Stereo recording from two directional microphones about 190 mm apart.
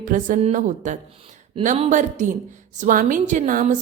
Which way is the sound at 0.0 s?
45° right (ahead or behind).